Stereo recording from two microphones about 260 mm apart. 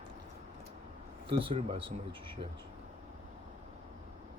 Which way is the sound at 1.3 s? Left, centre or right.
Centre.